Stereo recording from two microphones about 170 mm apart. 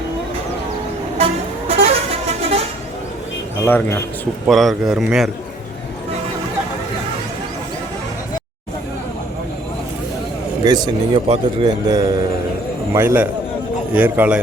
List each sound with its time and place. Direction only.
1.2 s vehicle: 35° right (ahead or behind)
3.6 s speech: 15° left (ahead or behind)
4.4 s a man's voice: centre (ahead or behind)
10.6 s a man's voice: 25° right (ahead or behind); by 14.3 s 10° right (ahead or behind)